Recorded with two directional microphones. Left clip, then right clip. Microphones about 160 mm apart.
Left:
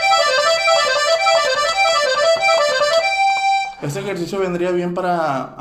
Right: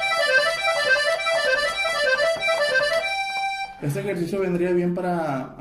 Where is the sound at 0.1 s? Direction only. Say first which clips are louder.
Left 3 dB; 25° left (ahead or behind).